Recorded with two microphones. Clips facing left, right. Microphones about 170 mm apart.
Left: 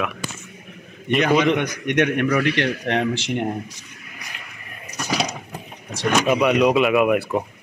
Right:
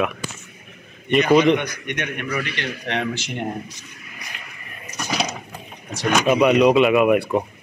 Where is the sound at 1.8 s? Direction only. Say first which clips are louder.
Left 9 dB; 90° left.